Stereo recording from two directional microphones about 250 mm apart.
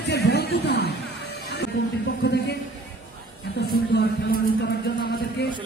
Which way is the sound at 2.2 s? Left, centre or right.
Left.